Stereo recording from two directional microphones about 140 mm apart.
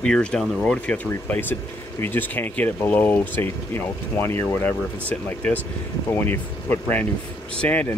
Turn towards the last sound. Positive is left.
turn(degrees=10)  # may be behind; listen again after turning